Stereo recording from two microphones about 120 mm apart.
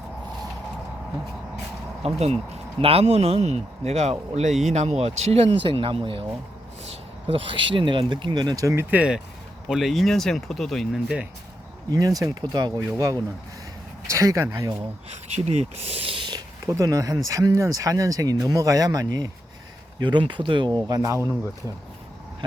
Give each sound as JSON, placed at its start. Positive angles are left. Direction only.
{"t": 2.0, "sound": "speech", "side_deg": -60}
{"t": 11.9, "sound": "speech", "side_deg": -30}
{"t": 15.3, "sound": "speech", "side_deg": -65}
{"t": 16.6, "sound": "speech", "side_deg": -25}